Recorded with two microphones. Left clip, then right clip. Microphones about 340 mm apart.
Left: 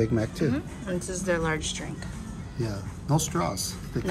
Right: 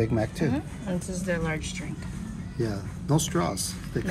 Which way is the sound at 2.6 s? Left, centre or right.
Left.